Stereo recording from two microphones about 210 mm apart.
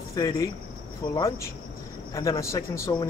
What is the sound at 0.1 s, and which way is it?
A man's voice, 15° left (ahead or behind).